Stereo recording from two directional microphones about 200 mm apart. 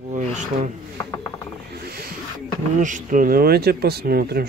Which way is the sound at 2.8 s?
40° right (ahead or behind).